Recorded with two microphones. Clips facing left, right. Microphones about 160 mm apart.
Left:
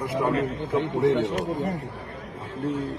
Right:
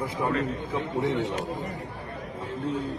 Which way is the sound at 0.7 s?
80° left.